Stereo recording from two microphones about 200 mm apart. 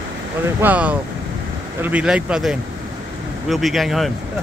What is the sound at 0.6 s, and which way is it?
Speech, 5° right (ahead or behind).